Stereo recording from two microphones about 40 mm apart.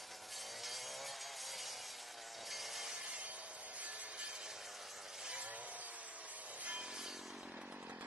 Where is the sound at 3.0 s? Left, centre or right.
Right.